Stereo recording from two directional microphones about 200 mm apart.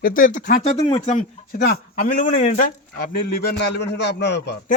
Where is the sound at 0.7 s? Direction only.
25° left (ahead or behind).